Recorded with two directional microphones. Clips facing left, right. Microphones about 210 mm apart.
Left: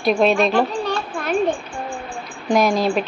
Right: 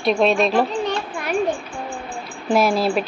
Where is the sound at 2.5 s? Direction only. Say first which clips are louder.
Left 1 dB; 5° right (ahead or behind).